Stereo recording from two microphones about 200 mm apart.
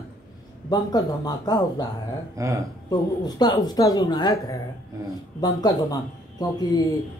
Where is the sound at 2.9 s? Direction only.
20° left (ahead or behind).